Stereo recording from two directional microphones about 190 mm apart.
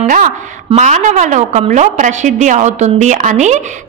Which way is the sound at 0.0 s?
40° right (ahead or behind).